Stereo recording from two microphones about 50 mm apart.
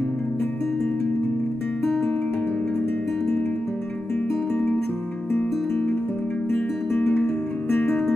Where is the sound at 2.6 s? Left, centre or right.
Centre.